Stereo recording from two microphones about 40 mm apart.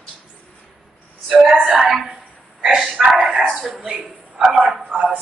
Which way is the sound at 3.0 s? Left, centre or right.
Centre.